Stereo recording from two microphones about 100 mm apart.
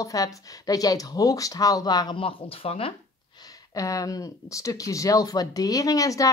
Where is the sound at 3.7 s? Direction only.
35° left (ahead or behind).